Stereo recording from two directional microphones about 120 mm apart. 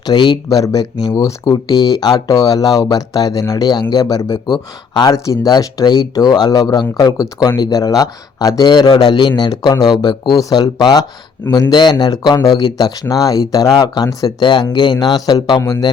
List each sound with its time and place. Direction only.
0.1 s speech: 35° left (ahead or behind)
5.1 s speech: 30° left (ahead or behind)